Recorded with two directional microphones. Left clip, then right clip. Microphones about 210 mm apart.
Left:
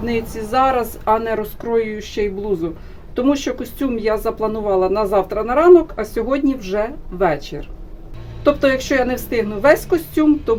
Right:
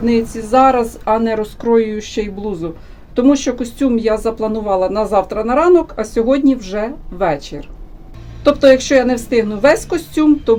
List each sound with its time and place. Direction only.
0.0 s speech: 20° right (ahead or behind)
8.5 s speech: 25° right (ahead or behind)